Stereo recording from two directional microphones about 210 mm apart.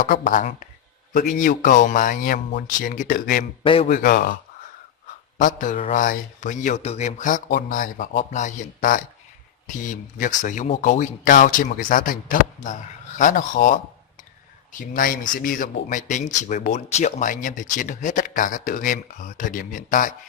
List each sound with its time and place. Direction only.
0.0 s speech: 40° left (ahead or behind)
3.6 s a man's voice: 25° left (ahead or behind)
3.8 s speech: 40° left (ahead or behind)
5.4 s speech: 40° left (ahead or behind)